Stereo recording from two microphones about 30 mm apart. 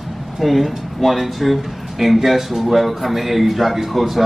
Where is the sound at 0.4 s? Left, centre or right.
Centre.